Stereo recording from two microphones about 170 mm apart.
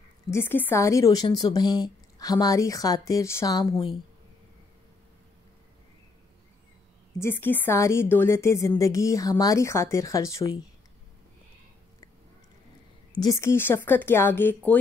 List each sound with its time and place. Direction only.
0.3 s a woman's voice: 15° left (ahead or behind)
7.2 s a woman's voice: 15° left (ahead or behind)
13.1 s a woman's voice: 20° left (ahead or behind)